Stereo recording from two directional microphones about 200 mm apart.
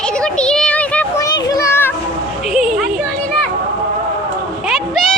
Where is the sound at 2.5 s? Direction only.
Centre (ahead or behind).